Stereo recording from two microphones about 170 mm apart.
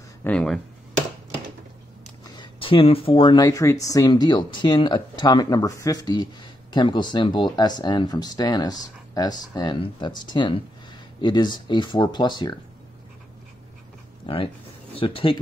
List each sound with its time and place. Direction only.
0.2 s a sound: 5° left (ahead or behind)
2.2 s speech: 25° left (ahead or behind)
14.2 s speech: 30° left (ahead or behind)